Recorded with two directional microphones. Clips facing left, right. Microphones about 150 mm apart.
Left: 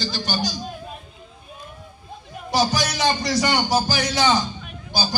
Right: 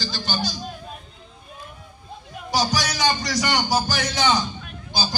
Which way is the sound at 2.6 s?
25° left (ahead or behind).